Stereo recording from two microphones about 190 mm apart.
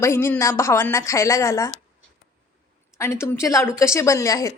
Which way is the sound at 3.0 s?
15° left (ahead or behind).